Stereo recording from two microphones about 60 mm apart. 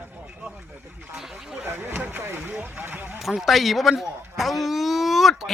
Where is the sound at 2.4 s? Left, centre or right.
Right.